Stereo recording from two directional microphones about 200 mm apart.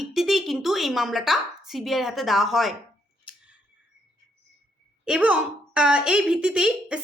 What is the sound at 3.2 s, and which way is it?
Scissors, 5° right (ahead or behind).